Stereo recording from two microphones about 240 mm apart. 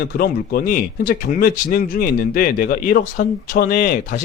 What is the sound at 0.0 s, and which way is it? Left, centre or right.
Speech, left.